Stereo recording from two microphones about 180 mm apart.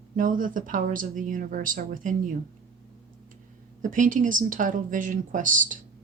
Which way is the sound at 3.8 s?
45° right (ahead or behind).